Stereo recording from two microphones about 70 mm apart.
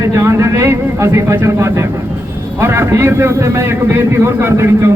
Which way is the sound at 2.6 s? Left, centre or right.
Right.